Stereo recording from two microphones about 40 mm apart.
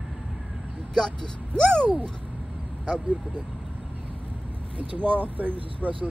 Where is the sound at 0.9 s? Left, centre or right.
Centre.